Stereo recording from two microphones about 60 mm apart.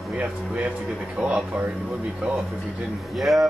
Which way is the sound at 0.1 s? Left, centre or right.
Right.